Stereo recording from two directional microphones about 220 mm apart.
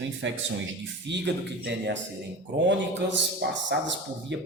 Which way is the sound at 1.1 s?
55° right (ahead or behind).